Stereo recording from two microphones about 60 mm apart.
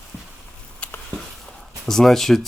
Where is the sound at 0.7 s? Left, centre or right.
Left.